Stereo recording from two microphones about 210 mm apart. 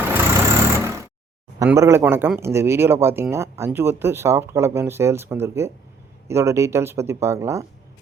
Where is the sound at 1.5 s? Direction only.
15° right (ahead or behind).